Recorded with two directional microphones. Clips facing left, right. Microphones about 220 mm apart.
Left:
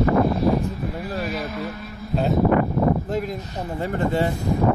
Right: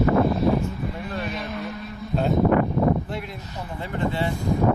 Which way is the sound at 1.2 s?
Centre (ahead or behind).